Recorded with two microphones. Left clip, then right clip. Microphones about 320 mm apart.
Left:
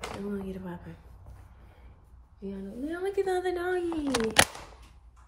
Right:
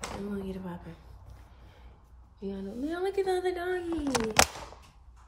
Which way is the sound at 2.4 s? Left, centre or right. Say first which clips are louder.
Right 1 dB; centre.